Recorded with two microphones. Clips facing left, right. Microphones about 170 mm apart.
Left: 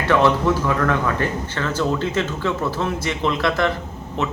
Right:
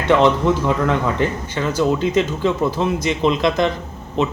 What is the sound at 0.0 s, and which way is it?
Speech, 20° right (ahead or behind).